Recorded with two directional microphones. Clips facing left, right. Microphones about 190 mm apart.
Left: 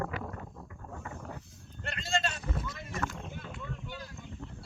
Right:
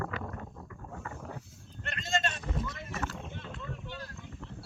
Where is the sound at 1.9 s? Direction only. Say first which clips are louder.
Even; 30° left (ahead or behind).